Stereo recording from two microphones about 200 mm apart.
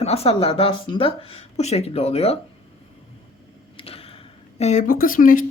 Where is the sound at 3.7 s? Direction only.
30° left (ahead or behind).